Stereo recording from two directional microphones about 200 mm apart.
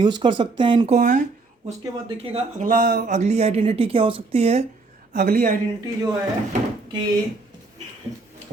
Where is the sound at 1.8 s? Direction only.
25° right (ahead or behind); by 3.2 s 50° right (ahead or behind).